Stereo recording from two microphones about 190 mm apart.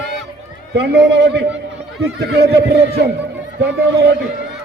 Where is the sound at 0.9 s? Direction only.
65° right (ahead or behind).